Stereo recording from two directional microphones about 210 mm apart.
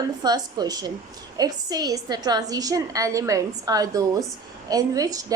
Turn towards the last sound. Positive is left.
turn(degrees=-15)  # may be behind; listen again after turning